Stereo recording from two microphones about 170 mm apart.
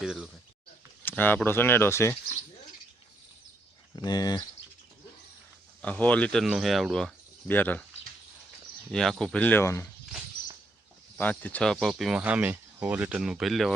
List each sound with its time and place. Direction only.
0.0 s speech: 5° right (ahead or behind)
1.0 s speech: 10° left (ahead or behind)
3.9 s speech: 25° left (ahead or behind)
5.8 s speech: 10° left (ahead or behind)
8.9 s speech: 5° left (ahead or behind)
11.2 s speech: 10° left (ahead or behind)